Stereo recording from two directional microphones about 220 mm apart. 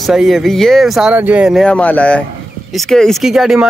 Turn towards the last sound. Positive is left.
turn(degrees=0)  # may be behind; listen again after turning